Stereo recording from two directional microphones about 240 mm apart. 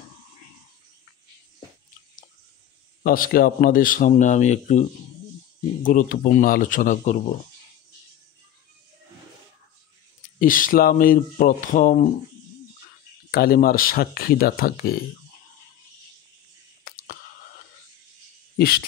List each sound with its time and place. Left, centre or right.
3.0 s a man's voice: left
10.4 s a man's voice: left
13.3 s a man's voice: left
16.8 s a sound: left